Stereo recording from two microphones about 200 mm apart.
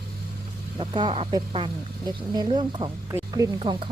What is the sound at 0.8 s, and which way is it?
A woman's voice, 25° right (ahead or behind).